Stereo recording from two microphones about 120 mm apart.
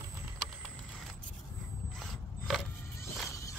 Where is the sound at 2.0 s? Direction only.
Centre (ahead or behind).